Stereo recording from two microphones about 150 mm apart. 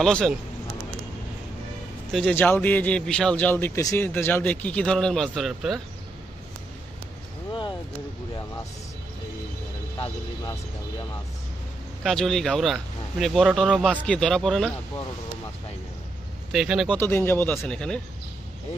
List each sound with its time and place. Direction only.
0.0 s speech: 5° left (ahead or behind)
2.3 s speech: 15° left (ahead or behind); by 5.8 s 5° right (ahead or behind)
9.9 s speech: 35° left (ahead or behind)
12.0 s speech: centre (ahead or behind)
16.5 s speech: centre (ahead or behind)
16.9 s speech: 15° left (ahead or behind)